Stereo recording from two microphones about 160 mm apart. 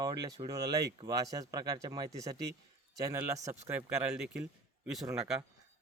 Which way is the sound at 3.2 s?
10° right (ahead or behind).